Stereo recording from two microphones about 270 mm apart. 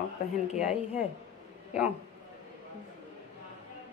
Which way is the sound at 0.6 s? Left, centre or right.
Centre.